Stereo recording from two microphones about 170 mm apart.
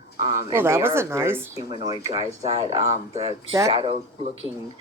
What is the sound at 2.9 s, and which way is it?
Speech, 40° right (ahead or behind).